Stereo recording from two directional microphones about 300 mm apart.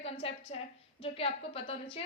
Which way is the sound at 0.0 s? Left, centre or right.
Centre.